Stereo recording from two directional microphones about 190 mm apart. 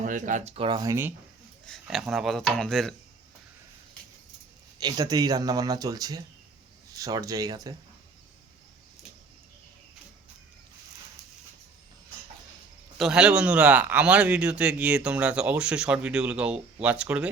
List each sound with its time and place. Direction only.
0.0 s speech: 40° right (ahead or behind); by 1.1 s 15° right (ahead or behind)
1.6 s a man's voice: centre (ahead or behind)
4.8 s speech: 20° right (ahead or behind)
13.0 s a man's voice: 5° right (ahead or behind)